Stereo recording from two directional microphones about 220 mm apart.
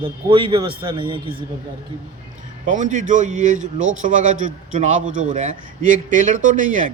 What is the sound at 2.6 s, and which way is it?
Speech, 35° right (ahead or behind).